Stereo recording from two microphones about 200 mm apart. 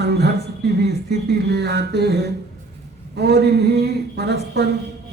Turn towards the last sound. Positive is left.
turn(degrees=-55)  # may be behind; listen again after turning